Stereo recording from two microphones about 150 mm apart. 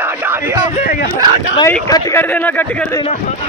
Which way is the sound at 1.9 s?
25° left (ahead or behind).